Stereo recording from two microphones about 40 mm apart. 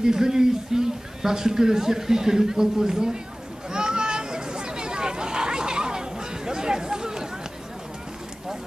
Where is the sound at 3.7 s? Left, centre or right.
Centre.